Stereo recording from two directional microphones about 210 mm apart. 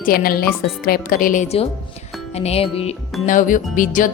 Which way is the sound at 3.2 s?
40° left (ahead or behind).